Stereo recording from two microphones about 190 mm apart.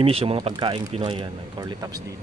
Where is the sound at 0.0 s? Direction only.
30° right (ahead or behind).